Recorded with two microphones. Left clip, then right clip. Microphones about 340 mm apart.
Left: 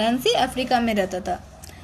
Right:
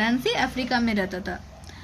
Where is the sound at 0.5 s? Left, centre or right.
Centre.